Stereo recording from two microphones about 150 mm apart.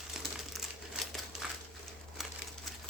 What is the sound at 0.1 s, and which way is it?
Crumpling, centre (ahead or behind).